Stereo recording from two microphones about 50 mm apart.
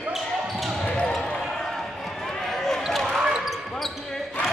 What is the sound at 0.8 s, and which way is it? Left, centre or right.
Basketball bounce, centre.